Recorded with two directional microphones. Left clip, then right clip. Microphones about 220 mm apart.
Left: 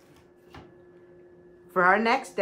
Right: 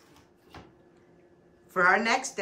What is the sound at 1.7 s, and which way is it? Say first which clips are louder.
Speech: left 2 dB; 5° left (ahead or behind).